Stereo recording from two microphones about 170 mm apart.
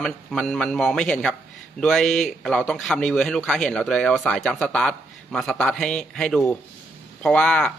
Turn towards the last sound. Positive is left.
turn(degrees=5)  # may be behind; listen again after turning